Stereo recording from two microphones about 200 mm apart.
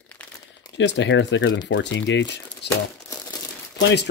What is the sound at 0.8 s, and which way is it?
Speech, 65° left (ahead or behind).